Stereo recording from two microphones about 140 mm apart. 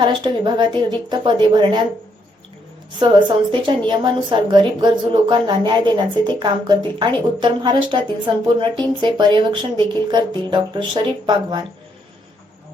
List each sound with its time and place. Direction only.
0.0 s a woman's voice: 35° right (ahead or behind)
3.0 s a woman's voice: 35° right (ahead or behind)